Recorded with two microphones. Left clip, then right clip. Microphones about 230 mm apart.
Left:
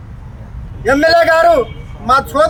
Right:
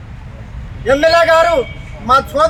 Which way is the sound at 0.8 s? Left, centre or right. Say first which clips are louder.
Even; centre.